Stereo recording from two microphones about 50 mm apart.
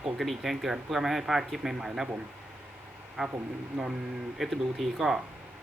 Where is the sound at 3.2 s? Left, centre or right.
Centre.